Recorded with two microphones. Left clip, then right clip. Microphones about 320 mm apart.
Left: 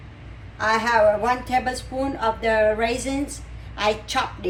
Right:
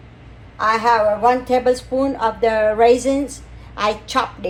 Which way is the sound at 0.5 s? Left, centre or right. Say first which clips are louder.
Right 4 dB; centre.